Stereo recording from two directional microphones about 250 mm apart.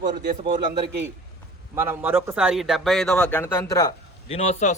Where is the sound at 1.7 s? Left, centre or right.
Centre; by 4.7 s left.